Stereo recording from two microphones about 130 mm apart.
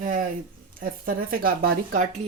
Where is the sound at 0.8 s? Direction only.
90° right.